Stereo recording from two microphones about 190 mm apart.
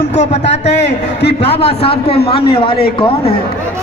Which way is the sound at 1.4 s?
30° left (ahead or behind).